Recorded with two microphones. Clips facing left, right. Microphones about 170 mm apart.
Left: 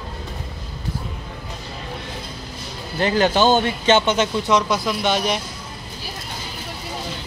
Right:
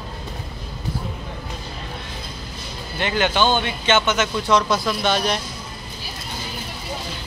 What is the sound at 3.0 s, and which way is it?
Speech, 35° left (ahead or behind).